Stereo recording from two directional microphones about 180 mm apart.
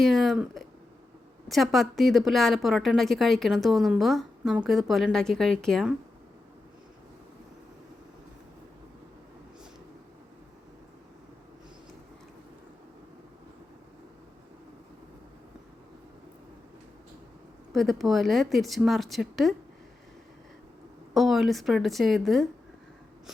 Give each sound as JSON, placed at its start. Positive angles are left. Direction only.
{"t": 0.0, "sound": "a woman's voice", "side_deg": 0}
{"t": 17.7, "sound": "a woman's voice", "side_deg": 0}
{"t": 21.1, "sound": "a woman's voice", "side_deg": 0}